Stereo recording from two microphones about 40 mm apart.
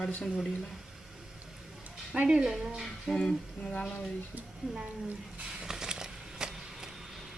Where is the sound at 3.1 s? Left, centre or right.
Centre.